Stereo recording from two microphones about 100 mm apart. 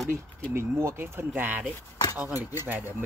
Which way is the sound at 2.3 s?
35° left (ahead or behind).